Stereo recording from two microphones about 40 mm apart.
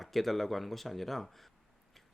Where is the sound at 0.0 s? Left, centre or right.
Centre.